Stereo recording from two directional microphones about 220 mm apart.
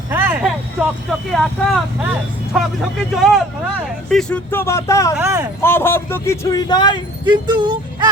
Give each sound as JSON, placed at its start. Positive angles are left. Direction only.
{"t": 0.1, "sound": "vehicle", "side_deg": -10}
{"t": 1.3, "sound": "a man's voice", "side_deg": 0}
{"t": 5.1, "sound": "speech", "side_deg": -10}
{"t": 5.6, "sound": "a man's voice", "side_deg": 10}
{"t": 7.3, "sound": "speech", "side_deg": -20}